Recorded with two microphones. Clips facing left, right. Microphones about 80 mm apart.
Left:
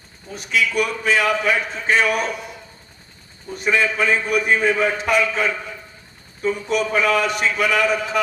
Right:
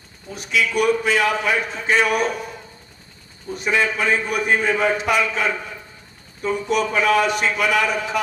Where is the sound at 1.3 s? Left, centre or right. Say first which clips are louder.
Left 1 dB; right.